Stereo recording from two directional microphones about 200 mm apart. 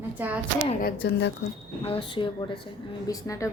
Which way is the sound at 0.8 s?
50° left (ahead or behind).